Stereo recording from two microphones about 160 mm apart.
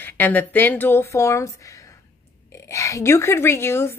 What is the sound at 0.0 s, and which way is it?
Speech, 10° left (ahead or behind).